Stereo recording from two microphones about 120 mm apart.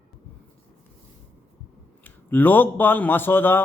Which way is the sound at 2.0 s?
15° left (ahead or behind).